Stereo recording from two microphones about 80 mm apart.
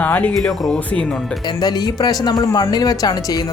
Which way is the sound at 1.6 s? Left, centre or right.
Left.